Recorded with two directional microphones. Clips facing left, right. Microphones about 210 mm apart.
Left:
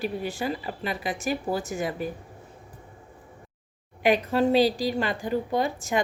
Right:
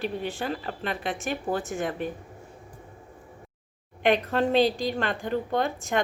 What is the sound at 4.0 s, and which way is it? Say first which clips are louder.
Speech: left 1 dB; 5° left (ahead or behind).